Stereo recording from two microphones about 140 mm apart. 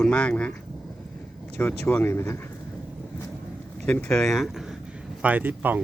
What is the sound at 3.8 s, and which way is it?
Speech, 5° left (ahead or behind).